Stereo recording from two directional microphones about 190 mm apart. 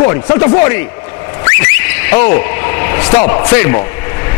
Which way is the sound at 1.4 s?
10° left (ahead or behind).